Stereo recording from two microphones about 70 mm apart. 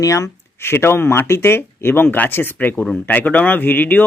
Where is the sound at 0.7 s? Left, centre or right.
Left.